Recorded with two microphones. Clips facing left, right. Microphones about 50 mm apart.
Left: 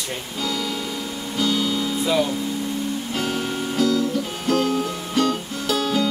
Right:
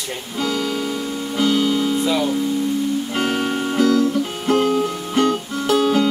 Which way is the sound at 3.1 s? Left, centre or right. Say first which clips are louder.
Right 4 dB; right.